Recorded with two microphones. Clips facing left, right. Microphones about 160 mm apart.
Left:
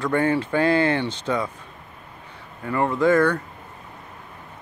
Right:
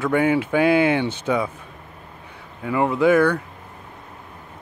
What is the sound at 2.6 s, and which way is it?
Speech, 10° right (ahead or behind).